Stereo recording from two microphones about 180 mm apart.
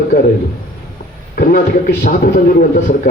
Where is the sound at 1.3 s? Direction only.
50° left (ahead or behind).